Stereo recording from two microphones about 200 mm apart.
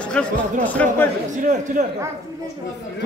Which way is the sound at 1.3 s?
40° right (ahead or behind).